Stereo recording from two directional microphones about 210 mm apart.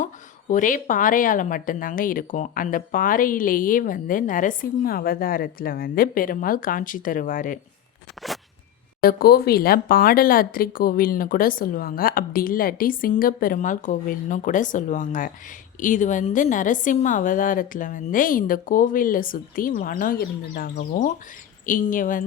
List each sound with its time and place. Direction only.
0.0 s a woman's voice: 40° left (ahead or behind)
9.0 s a woman's voice: 45° left (ahead or behind)